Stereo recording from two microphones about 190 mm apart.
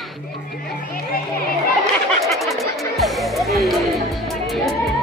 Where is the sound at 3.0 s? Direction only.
Centre (ahead or behind).